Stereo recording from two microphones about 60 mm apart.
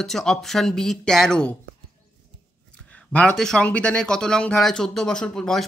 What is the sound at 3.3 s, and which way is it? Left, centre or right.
Speech, centre.